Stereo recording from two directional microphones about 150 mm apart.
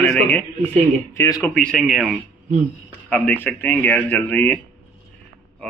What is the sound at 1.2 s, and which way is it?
Speech, 25° left (ahead or behind).